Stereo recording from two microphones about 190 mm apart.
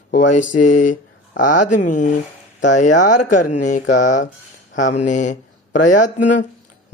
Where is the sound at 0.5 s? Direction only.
40° left (ahead or behind).